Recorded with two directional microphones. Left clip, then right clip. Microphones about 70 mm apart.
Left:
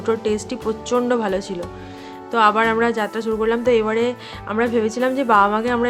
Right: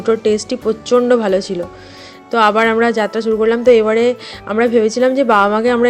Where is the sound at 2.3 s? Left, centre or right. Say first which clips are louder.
Right 4 dB; right.